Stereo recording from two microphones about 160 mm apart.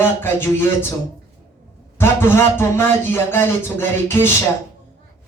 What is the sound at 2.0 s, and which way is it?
Music, 15° left (ahead or behind).